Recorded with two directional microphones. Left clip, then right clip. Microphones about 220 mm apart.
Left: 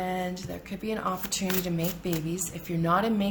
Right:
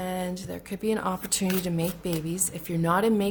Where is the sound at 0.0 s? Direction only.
45° right (ahead or behind).